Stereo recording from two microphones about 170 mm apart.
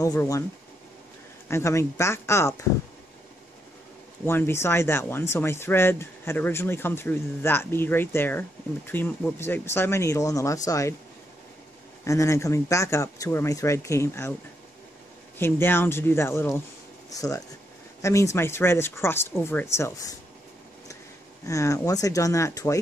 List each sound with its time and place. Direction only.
0.0 s speech: 20° left (ahead or behind)
1.5 s speech: 15° left (ahead or behind)
4.3 s speech: 15° left (ahead or behind)
12.0 s speech: 20° left (ahead or behind)
15.3 s speech: 15° left (ahead or behind)
21.5 s speech: 20° left (ahead or behind)